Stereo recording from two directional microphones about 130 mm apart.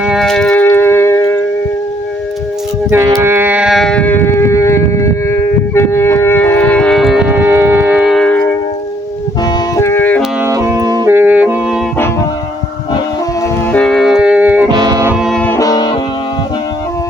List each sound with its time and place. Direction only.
0.0 s music: centre (ahead or behind); by 1.4 s 20° left (ahead or behind)
3.2 s a sound: 20° right (ahead or behind); by 7.3 s centre (ahead or behind)
7.3 s music: 15° right (ahead or behind)
8.0 s music: centre (ahead or behind)
9.4 s music: 25° left (ahead or behind)
10.4 s music: 20° right (ahead or behind)
11.1 s music: 15° right (ahead or behind)
13.7 s music: 5° left (ahead or behind); by 14.7 s 10° right (ahead or behind)
14.7 s music: 30° right (ahead or behind)
15.1 s music: centre (ahead or behind)
15.5 s music: 30° left (ahead or behind)